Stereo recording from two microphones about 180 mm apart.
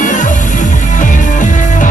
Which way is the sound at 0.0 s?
45° left (ahead or behind).